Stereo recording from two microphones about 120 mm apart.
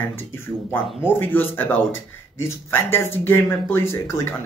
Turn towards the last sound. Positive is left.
turn(degrees=20)  # may be behind; listen again after turning